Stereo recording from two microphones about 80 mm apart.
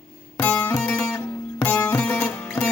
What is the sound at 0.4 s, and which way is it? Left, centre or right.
Music, centre.